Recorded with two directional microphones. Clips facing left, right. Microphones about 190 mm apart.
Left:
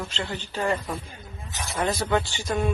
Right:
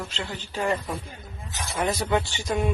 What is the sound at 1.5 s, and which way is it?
Speech, 15° left (ahead or behind).